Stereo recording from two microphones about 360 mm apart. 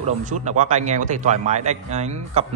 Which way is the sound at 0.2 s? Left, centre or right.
Centre.